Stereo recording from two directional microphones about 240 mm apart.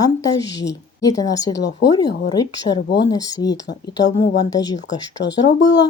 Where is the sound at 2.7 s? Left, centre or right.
Left.